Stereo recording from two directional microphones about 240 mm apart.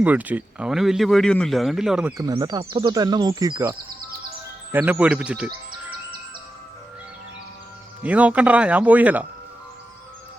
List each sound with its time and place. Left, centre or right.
0.0 s speech: centre
2.1 s speech: centre
8.0 s speech: centre